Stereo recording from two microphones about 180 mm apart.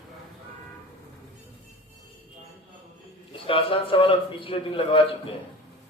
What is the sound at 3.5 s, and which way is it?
A man's voice, 30° left (ahead or behind).